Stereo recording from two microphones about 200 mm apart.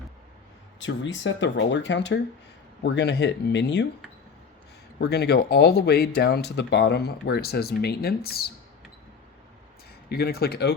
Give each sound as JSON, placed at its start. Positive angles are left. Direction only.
{"t": 0.8, "sound": "speech", "side_deg": 65}
{"t": 4.9, "sound": "speech", "side_deg": 55}
{"t": 10.1, "sound": "speech", "side_deg": 50}